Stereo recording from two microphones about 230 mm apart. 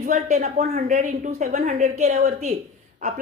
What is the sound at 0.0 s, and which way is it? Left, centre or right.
A woman's voice, right.